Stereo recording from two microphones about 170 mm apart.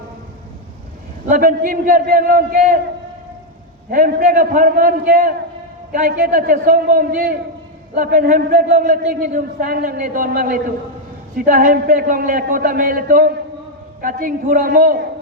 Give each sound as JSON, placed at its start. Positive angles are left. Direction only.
{"t": 1.3, "sound": "a man's voice", "side_deg": -55}
{"t": 3.8, "sound": "a man's voice", "side_deg": -55}